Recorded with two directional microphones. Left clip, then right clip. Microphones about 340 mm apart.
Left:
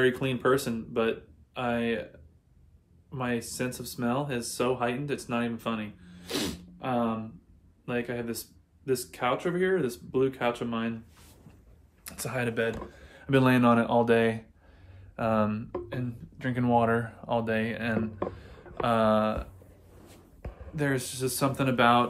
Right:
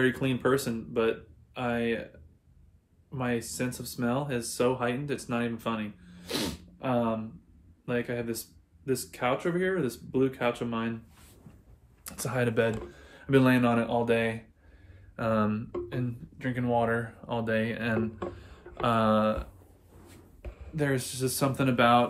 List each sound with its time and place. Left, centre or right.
0.0 s speech: centre
3.1 s speech: centre
12.0 s speech: centre
13.1 s speech: centre
15.1 s speech: centre
16.3 s speech: centre
17.3 s speech: centre
20.7 s speech: centre